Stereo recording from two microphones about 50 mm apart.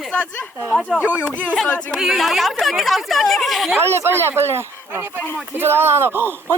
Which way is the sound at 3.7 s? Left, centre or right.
Right.